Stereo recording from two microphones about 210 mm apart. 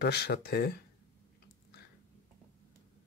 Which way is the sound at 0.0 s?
50° left (ahead or behind).